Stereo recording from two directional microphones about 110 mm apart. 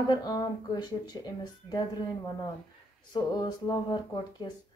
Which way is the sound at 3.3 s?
40° left (ahead or behind).